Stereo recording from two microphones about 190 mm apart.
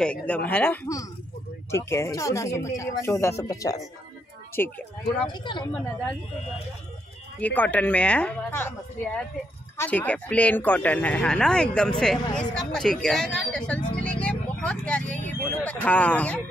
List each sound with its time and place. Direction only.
0.0 s speech: 5° left (ahead or behind)
5.3 s speech: 25° left (ahead or behind)
7.3 s speech: 10° left (ahead or behind)